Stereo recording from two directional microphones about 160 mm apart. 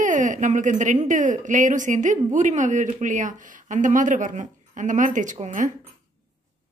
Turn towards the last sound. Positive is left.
turn(degrees=-50)  # may be behind; listen again after turning